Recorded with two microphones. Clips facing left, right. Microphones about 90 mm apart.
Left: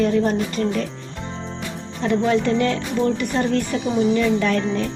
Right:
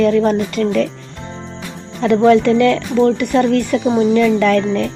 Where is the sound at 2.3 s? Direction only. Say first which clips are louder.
Right 9 dB; 90° right.